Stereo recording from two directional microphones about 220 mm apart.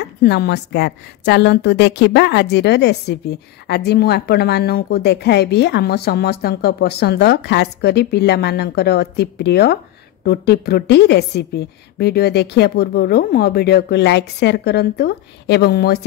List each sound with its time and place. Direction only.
0.2 s a woman's voice: 50° left (ahead or behind)